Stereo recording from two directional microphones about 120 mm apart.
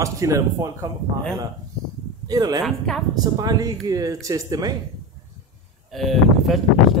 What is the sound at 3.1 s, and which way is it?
Speech, 35° right (ahead or behind).